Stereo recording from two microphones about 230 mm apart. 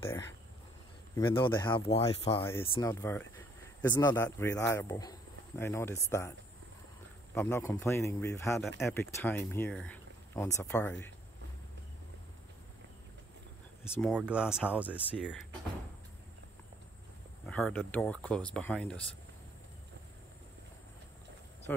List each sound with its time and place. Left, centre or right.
0.0 s speech: centre
2.9 s speech: centre
7.3 s speech: centre
8.5 s speech: centre
13.8 s speech: centre
17.5 s speech: centre